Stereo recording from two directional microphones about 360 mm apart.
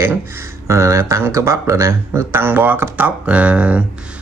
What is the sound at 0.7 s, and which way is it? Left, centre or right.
A man's voice, centre.